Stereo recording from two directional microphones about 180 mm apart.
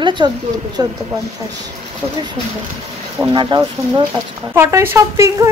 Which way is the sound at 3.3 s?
25° right (ahead or behind).